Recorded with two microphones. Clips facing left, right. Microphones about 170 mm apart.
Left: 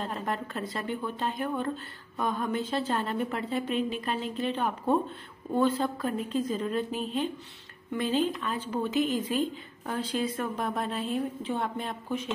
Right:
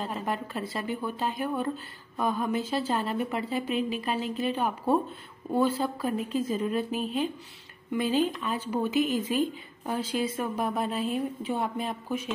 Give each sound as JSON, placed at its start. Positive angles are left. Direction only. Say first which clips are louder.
{"t": 0.0, "sound": "a woman's voice", "louder": "right 1 dB", "side_deg": 0}